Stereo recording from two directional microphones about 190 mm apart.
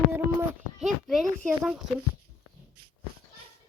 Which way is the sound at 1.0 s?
Centre (ahead or behind).